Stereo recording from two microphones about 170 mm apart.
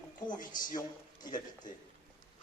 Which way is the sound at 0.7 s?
25° left (ahead or behind).